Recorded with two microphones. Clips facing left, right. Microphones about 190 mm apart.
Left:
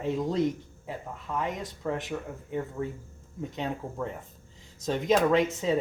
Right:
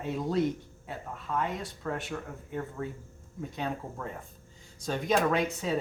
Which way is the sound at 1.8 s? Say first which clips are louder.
Left 3 dB; 15° left (ahead or behind).